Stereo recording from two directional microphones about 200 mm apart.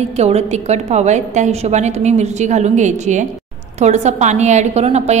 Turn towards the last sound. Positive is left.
turn(degrees=-35)  # may be behind; listen again after turning